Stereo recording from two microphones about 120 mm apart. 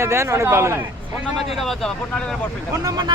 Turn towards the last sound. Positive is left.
turn(degrees=-35)  # may be behind; listen again after turning